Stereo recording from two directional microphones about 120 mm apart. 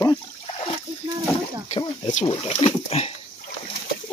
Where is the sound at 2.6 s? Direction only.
55° left (ahead or behind).